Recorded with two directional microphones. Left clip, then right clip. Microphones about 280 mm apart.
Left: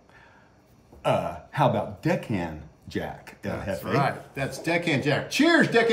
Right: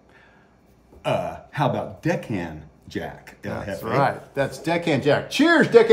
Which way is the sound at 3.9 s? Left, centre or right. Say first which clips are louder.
Right 6 dB; centre.